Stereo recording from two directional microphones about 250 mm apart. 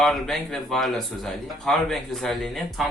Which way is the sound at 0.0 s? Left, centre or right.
Centre.